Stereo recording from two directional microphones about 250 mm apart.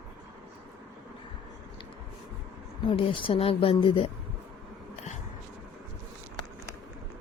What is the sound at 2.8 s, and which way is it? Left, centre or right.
Speech, left.